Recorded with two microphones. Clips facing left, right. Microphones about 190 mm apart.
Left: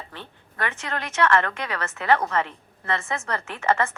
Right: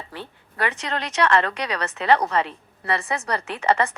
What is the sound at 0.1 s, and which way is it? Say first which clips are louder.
A woman's voice: right 4 dB; 15° right (ahead or behind).